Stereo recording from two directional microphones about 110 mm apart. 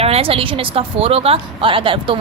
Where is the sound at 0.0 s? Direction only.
60° right (ahead or behind).